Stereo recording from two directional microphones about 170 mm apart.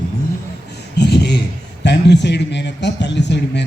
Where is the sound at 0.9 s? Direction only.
80° left.